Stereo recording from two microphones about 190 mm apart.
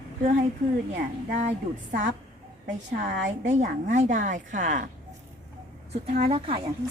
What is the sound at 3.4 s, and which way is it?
A woman's voice, 40° right (ahead or behind).